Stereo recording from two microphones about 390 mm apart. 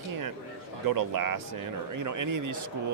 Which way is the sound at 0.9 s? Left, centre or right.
Right.